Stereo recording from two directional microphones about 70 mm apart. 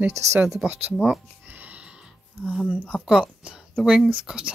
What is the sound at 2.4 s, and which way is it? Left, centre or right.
Speech, centre.